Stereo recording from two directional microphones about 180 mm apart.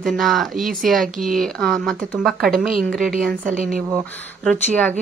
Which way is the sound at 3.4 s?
50° right (ahead or behind).